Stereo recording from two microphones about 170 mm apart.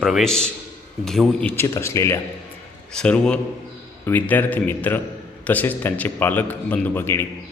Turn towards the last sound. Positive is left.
turn(degrees=15)  # may be behind; listen again after turning